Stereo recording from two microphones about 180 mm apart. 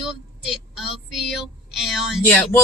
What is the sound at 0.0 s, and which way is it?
Child singing, centre (ahead or behind).